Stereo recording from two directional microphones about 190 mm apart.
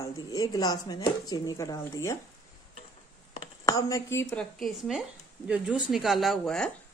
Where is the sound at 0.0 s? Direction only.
20° left (ahead or behind).